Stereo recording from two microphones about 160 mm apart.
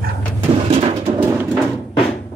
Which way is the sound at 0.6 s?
40° right (ahead or behind).